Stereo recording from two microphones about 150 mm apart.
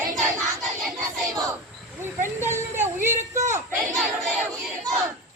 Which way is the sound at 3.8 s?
Centre (ahead or behind).